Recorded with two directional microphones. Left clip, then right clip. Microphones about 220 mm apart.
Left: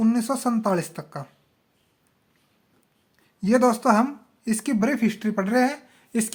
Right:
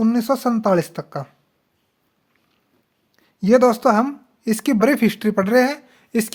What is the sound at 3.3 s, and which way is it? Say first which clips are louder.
Speech: right 6 dB; 40° right (ahead or behind).